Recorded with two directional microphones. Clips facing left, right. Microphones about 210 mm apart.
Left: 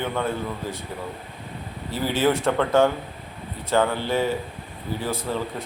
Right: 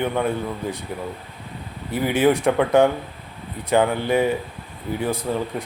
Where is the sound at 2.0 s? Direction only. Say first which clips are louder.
Right 3 dB; 15° right (ahead or behind).